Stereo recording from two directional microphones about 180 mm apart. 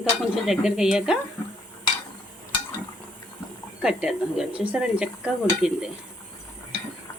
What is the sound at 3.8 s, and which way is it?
Dishes, 5° right (ahead or behind).